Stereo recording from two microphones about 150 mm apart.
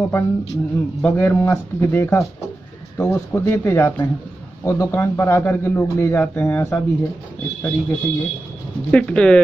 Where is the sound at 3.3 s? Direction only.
15° left (ahead or behind).